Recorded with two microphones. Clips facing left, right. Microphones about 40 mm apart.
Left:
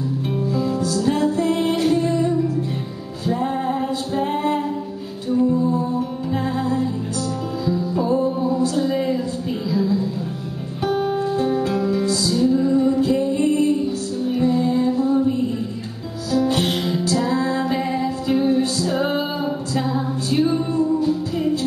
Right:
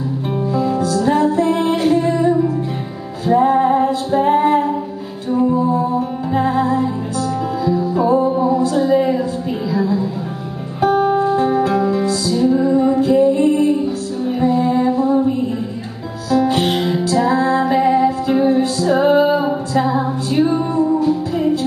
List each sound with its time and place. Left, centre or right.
0.5 s music: centre
3.3 s music: centre
5.5 s music: right
5.9 s music: centre
16.3 s music: right
16.9 s music: centre
19.3 s a sound: centre
20.8 s music: centre